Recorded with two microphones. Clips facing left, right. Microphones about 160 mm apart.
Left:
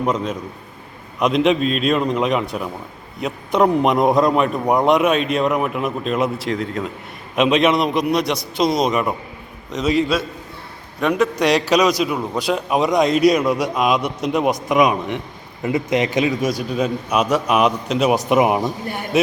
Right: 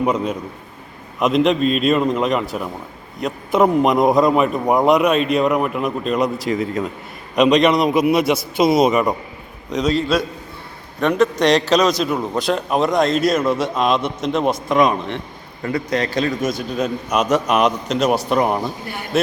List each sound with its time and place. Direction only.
0.0 s a man's voice: 10° right (ahead or behind); by 12.1 s 10° left (ahead or behind)
12.1 s a man's voice: 5° right (ahead or behind)
12.4 s a man's voice: 10° left (ahead or behind)